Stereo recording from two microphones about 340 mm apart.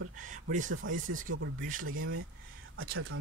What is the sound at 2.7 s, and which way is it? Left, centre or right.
Speech, right.